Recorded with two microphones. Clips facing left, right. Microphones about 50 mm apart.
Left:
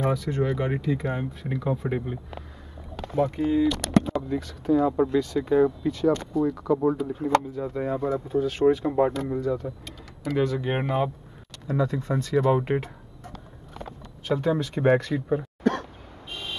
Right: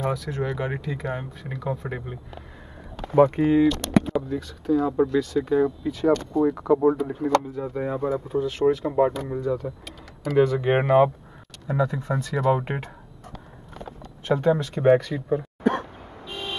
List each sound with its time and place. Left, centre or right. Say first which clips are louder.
0.1 s speech: left 2 dB; centre
3.2 s speech: right 5 dB; right
4.3 s speech: even; centre
5.9 s speech: right 2 dB; centre
8.5 s speech: left 1 dB; centre
9.4 s speech: right 1 dB; centre
10.4 s speech: right 6 dB; centre
10.8 s speech: right 10 dB; right
11.6 s speech: right 1 dB; centre
14.3 s speech: right 3 dB; centre
14.8 s speech: right 2 dB; centre
15.6 s a sound: right 2 dB; centre